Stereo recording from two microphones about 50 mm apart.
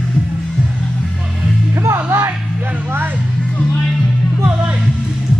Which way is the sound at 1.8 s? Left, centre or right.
Right.